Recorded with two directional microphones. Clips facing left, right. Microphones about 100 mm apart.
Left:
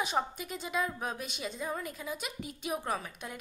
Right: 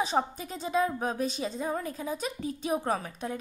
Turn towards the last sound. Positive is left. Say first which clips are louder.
# right 5 dB
turn(degrees=-35)  # may be behind; listen again after turning